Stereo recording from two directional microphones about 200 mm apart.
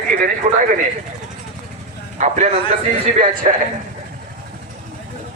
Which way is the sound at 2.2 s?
35° right (ahead or behind).